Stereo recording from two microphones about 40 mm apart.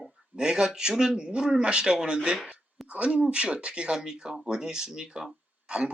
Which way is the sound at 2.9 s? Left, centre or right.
Right.